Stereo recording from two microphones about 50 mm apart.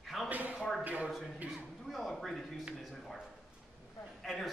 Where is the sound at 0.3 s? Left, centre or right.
Right.